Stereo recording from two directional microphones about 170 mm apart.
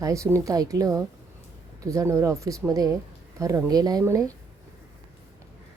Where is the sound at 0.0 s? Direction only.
20° right (ahead or behind).